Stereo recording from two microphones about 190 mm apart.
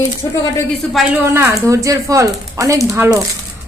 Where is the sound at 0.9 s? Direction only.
10° right (ahead or behind).